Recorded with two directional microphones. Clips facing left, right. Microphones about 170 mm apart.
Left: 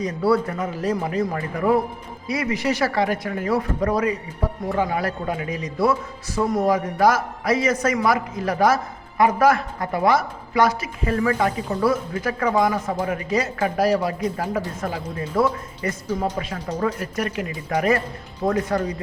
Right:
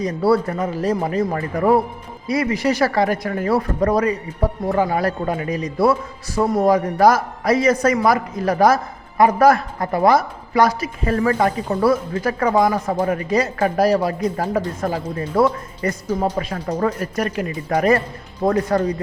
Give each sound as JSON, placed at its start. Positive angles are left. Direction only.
{"t": 0.0, "sound": "a man's voice", "side_deg": -35}
{"t": 18.4, "sound": "a man's voice", "side_deg": -35}